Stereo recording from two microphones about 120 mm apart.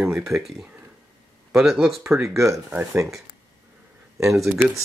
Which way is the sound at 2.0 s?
25° right (ahead or behind).